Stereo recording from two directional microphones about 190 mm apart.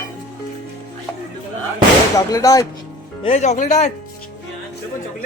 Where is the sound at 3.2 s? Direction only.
35° left (ahead or behind).